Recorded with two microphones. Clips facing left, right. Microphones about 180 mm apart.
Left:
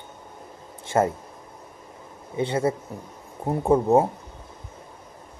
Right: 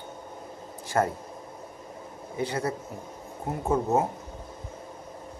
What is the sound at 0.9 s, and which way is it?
Speech, 20° left (ahead or behind).